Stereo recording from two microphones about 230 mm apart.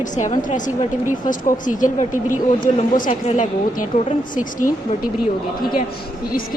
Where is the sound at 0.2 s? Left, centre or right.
Left.